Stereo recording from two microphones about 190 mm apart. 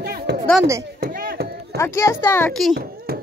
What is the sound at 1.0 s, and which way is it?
Chop, 50° right (ahead or behind).